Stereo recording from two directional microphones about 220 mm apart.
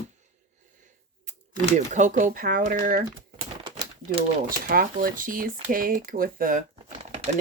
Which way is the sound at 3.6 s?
20° right (ahead or behind).